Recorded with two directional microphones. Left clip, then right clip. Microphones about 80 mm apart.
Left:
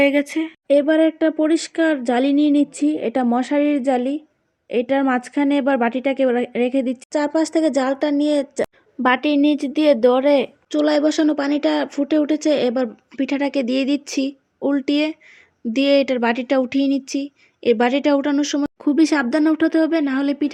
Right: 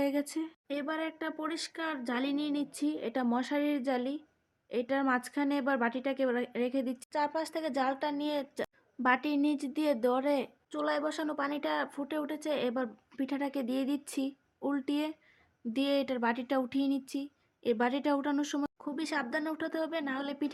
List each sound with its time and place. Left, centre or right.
0.0 s a woman's voice: left
18.3 s speech: centre
18.8 s a woman's voice: left